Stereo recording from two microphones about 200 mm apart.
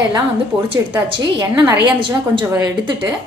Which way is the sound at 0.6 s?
25° right (ahead or behind).